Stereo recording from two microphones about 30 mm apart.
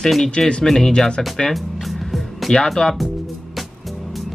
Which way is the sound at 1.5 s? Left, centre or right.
Centre.